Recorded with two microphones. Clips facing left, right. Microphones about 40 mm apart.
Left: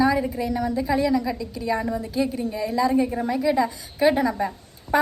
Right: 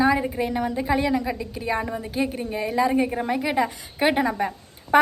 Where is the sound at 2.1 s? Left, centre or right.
Right.